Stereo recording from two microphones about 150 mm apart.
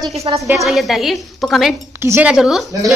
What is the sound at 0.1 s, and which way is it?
Speech, 45° right (ahead or behind).